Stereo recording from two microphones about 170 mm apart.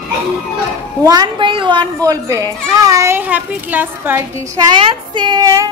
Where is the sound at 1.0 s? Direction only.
25° right (ahead or behind).